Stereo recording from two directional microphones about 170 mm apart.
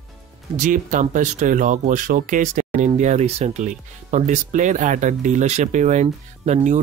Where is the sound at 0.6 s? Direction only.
50° right (ahead or behind).